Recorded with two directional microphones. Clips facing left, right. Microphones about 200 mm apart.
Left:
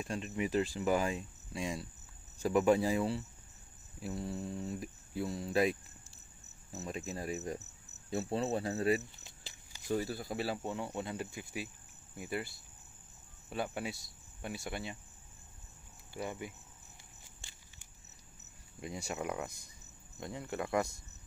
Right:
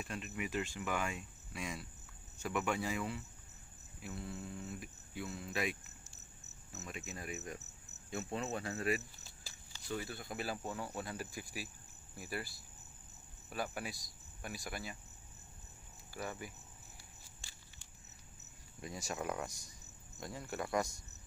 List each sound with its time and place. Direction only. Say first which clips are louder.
0.0 s cricket: left 6 dB; 30° left (ahead or behind)
4.0 s speech: left 6 dB; 35° left (ahead or behind)
6.7 s cricket: left 7 dB; 35° left (ahead or behind)
9.4 s walk: left 2 dB; 20° left (ahead or behind)
9.8 s speech: left 7 dB; 35° left (ahead or behind)
16.1 s speech: left 4 dB; 20° left (ahead or behind)
18.8 s speech: left 3 dB; 20° left (ahead or behind)